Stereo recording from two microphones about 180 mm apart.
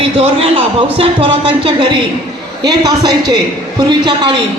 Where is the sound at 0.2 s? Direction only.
30° right (ahead or behind).